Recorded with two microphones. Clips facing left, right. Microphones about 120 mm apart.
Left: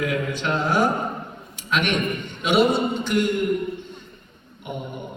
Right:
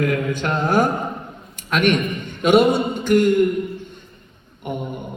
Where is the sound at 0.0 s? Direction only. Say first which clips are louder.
Right 4 dB; 50° right (ahead or behind).